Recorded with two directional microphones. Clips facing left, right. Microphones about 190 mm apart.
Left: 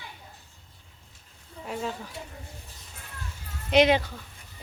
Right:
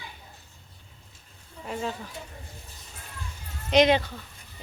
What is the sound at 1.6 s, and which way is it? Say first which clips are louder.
Speech: right 1 dB; centre (ahead or behind).